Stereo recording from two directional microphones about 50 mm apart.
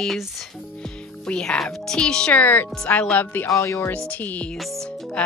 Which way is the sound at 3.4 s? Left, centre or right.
Left.